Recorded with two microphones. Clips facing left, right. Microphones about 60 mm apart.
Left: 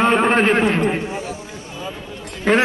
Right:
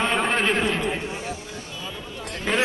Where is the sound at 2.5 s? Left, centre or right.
Left.